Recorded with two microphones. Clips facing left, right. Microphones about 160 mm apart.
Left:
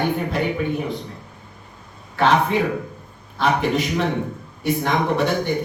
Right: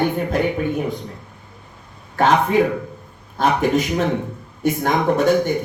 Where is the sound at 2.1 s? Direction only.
45° right (ahead or behind).